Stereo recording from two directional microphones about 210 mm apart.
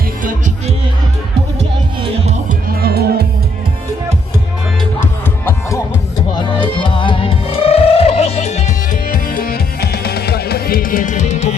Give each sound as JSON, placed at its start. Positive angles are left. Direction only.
{"t": 2.0, "sound": "music", "side_deg": -30}
{"t": 2.6, "sound": "music", "side_deg": -50}
{"t": 6.3, "sound": "music", "side_deg": 20}